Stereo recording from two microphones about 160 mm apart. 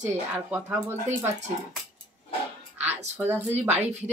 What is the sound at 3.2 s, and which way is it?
Speech, 10° right (ahead or behind).